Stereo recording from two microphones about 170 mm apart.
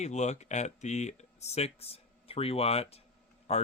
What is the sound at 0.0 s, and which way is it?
Speech, 40° left (ahead or behind).